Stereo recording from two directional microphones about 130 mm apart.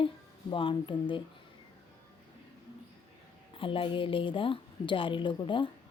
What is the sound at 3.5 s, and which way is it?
A woman's voice, 40° left (ahead or behind).